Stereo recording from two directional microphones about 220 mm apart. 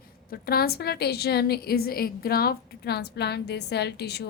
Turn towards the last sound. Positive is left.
turn(degrees=50)  # may be behind; listen again after turning